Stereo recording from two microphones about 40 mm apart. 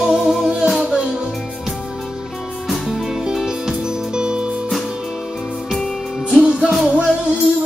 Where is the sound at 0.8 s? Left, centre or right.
Right.